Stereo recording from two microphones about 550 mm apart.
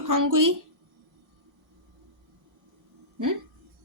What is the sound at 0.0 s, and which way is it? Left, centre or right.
Speech, right.